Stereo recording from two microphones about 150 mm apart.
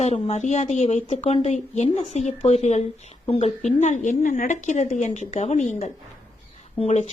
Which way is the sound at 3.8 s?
55° left (ahead or behind).